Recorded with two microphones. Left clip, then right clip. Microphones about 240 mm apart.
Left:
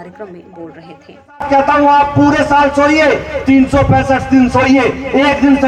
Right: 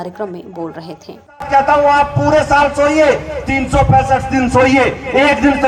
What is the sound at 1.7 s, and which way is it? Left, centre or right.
A man's voice, right.